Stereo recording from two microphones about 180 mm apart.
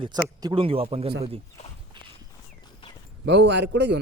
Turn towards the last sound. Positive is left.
turn(degrees=-70)  # may be behind; listen again after turning